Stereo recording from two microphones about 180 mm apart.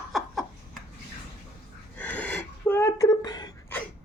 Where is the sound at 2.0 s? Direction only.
10° left (ahead or behind).